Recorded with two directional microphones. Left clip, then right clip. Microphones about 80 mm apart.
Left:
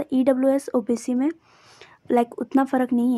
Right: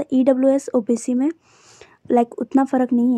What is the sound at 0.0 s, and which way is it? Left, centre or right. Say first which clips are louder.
A woman's voice: right 3 dB; right.